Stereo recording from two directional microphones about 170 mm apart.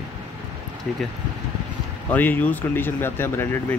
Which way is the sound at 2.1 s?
10° left (ahead or behind).